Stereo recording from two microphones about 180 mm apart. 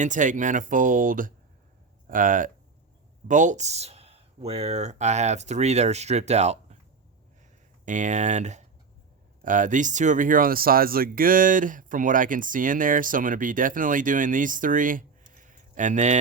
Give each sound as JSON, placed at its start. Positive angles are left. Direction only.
{"t": 0.0, "sound": "speech", "side_deg": -45}
{"t": 7.9, "sound": "speech", "side_deg": -45}